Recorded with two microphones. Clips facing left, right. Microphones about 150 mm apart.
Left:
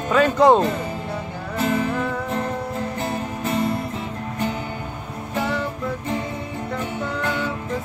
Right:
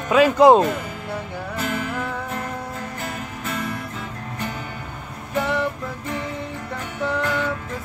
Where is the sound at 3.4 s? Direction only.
30° left (ahead or behind).